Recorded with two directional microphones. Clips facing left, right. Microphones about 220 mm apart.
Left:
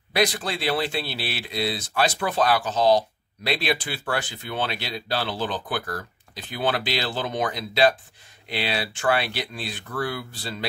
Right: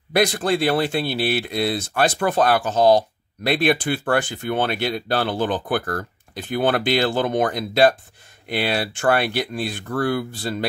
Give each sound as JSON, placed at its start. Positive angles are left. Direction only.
{"t": 0.1, "sound": "speech", "side_deg": -50}